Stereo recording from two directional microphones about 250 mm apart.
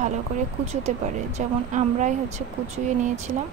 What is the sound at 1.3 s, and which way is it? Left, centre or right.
A woman's voice, right.